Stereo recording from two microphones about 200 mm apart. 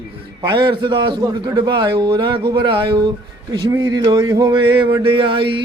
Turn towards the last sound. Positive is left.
turn(degrees=-25)  # may be behind; listen again after turning